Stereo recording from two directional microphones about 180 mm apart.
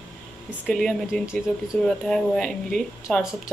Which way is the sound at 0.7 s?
Centre (ahead or behind).